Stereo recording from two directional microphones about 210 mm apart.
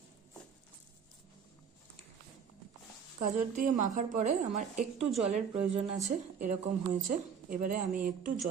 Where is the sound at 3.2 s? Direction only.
40° right (ahead or behind).